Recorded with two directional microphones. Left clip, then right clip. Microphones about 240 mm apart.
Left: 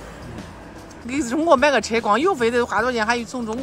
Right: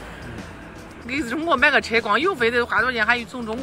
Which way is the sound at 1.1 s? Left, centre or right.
Centre.